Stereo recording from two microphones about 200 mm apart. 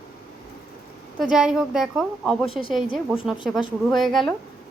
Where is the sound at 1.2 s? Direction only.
5° right (ahead or behind).